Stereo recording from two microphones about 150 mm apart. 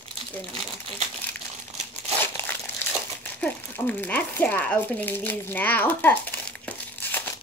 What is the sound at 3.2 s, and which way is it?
Speech, 10° left (ahead or behind).